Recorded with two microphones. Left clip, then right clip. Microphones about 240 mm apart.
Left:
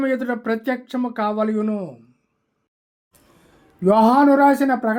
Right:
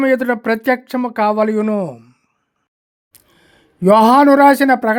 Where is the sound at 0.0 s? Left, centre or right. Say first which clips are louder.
Right 7 dB; right.